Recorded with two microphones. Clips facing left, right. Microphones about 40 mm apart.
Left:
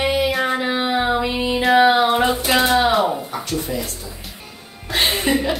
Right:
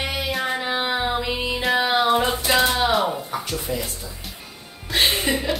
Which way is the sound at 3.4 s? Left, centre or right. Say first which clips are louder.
Left 6 dB; centre.